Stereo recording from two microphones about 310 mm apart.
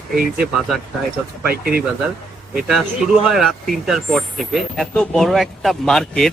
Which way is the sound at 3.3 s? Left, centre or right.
Centre.